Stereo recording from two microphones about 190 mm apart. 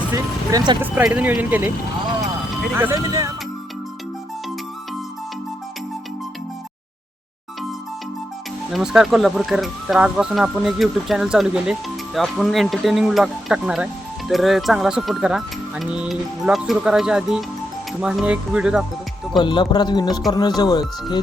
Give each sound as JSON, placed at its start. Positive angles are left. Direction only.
{"t": 0.1, "sound": "speech", "side_deg": -20}
{"t": 0.8, "sound": "speech", "side_deg": -10}
{"t": 2.7, "sound": "speech", "side_deg": -15}
{"t": 8.7, "sound": "speech", "side_deg": -5}
{"t": 19.4, "sound": "speech", "side_deg": 25}